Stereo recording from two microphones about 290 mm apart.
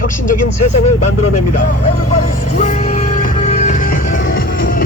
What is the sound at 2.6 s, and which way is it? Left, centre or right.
Music, left.